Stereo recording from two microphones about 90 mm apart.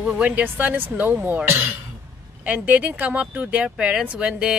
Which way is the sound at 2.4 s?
15° right (ahead or behind).